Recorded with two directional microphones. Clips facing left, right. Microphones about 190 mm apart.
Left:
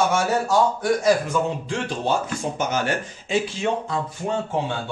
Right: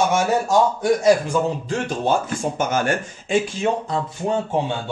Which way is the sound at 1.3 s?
45° right (ahead or behind).